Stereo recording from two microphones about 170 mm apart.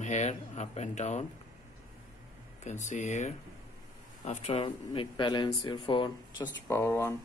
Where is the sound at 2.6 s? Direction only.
45° left (ahead or behind); by 6.5 s 30° left (ahead or behind).